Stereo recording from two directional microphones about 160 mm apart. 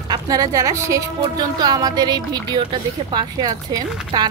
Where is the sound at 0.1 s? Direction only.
25° right (ahead or behind).